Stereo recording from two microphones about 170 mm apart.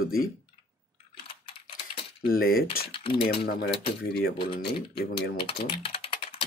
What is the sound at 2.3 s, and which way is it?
Speech, 60° left (ahead or behind).